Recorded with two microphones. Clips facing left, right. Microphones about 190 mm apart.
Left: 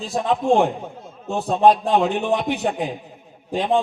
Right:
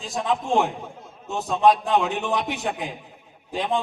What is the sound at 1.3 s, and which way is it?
Speech, 35° left (ahead or behind).